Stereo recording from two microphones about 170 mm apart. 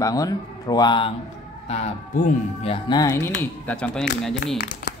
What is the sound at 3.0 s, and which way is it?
Speech, 20° left (ahead or behind).